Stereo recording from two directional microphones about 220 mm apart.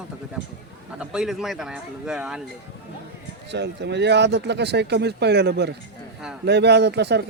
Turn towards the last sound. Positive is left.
turn(degrees=-50)  # may be behind; listen again after turning